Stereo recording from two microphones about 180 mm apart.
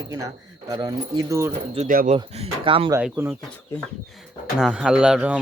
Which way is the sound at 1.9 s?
50° right (ahead or behind).